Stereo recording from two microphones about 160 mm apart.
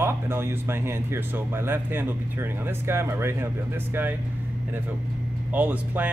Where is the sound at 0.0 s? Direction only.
15° right (ahead or behind).